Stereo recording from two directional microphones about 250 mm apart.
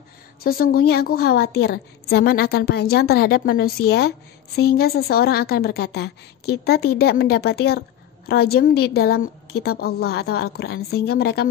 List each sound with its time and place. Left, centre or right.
0.4 s a woman's voice: left